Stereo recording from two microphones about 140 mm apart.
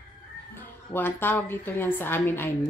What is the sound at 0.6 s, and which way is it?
A woman's voice, 15° left (ahead or behind).